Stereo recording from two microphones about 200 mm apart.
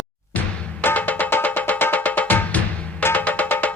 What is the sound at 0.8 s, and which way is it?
Music, 10° left (ahead or behind).